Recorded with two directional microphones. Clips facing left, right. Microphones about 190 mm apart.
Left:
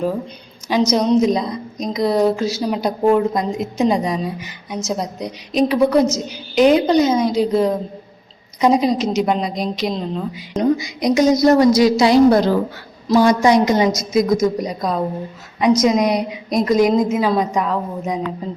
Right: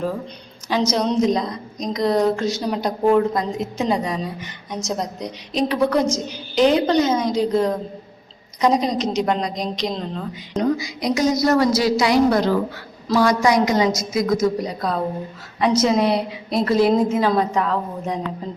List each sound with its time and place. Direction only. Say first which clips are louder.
0.9 s a woman's voice: left 4 dB; 10° left (ahead or behind)
10.6 s a woman's voice: left 4 dB; 20° left (ahead or behind)